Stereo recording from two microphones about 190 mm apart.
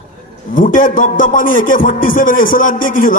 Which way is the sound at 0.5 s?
45° left (ahead or behind).